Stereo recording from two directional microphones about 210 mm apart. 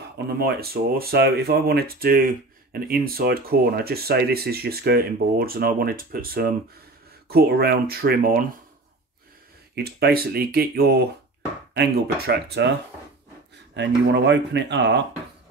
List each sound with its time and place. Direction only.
0.3 s speech: 50° right (ahead or behind)
9.8 s speech: 50° right (ahead or behind)
13.7 s speech: 55° right (ahead or behind)